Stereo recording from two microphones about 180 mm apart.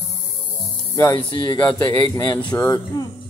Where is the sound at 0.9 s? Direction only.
20° left (ahead or behind).